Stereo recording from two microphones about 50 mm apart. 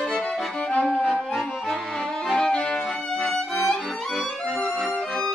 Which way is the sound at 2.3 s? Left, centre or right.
Centre.